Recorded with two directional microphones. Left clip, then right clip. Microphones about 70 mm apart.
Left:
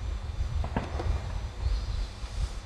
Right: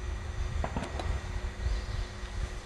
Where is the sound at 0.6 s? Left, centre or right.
Right.